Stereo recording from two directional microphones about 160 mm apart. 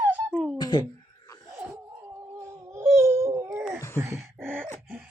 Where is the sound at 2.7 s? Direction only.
15° right (ahead or behind).